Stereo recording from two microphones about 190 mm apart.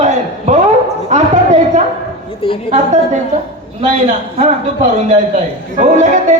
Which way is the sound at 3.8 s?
40° right (ahead or behind).